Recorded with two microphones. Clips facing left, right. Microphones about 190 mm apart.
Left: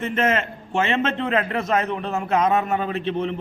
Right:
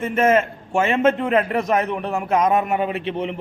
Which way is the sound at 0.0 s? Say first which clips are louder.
Right 5 dB; 10° right (ahead or behind).